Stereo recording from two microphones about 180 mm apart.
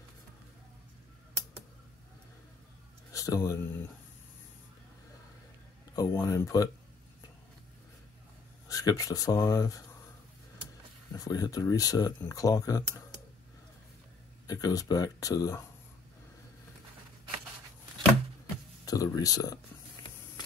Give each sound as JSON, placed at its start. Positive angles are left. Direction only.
{"t": 3.1, "sound": "speech", "side_deg": 20}
{"t": 5.9, "sound": "speech", "side_deg": 20}
{"t": 8.6, "sound": "speech", "side_deg": 20}
{"t": 11.1, "sound": "speech", "side_deg": 20}
{"t": 14.5, "sound": "speech", "side_deg": 20}
{"t": 18.9, "sound": "speech", "side_deg": 20}